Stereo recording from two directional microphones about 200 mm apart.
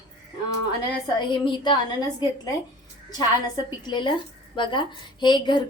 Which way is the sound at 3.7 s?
25° left (ahead or behind).